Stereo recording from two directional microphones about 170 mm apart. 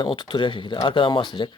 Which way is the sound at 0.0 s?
30° left (ahead or behind).